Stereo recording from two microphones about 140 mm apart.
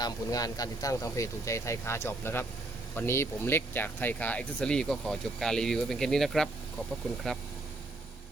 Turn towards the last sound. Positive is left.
turn(degrees=5)  # may be behind; listen again after turning